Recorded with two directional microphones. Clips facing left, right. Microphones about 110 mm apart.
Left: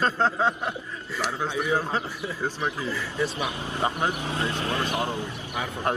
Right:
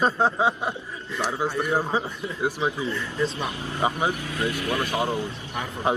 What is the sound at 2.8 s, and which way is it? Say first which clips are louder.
Speech: right 1 dB; 5° left (ahead or behind).